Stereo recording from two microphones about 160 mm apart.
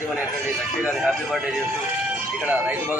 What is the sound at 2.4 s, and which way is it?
Speech, 10° right (ahead or behind).